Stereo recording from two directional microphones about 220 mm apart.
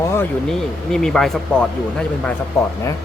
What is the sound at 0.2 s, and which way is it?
Speech, centre (ahead or behind).